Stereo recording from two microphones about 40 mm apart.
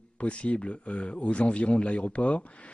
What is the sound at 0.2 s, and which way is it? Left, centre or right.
Speech, left.